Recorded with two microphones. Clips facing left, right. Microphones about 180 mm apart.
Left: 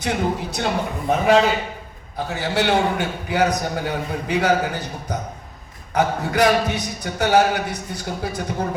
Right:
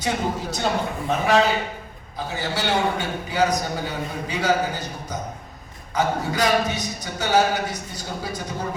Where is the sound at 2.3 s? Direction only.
60° left (ahead or behind).